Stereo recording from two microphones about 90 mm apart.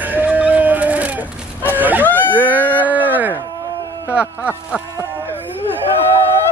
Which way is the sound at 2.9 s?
20° right (ahead or behind).